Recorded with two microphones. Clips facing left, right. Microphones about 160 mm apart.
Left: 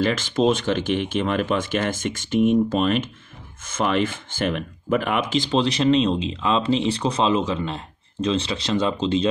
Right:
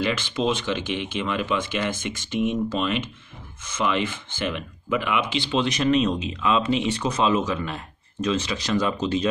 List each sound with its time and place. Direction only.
0.0 s speech: 45° left (ahead or behind); by 9.3 s 25° left (ahead or behind)